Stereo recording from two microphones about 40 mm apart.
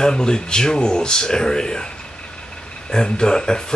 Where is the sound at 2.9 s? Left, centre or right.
Left.